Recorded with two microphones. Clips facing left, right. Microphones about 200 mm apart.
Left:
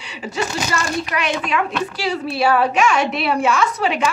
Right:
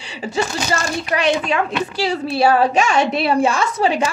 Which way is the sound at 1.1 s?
30° right (ahead or behind).